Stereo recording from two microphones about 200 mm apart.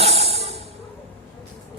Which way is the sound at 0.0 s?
30° right (ahead or behind).